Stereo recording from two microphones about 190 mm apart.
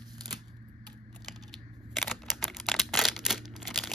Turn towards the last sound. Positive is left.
turn(degrees=0)  # may be behind; listen again after turning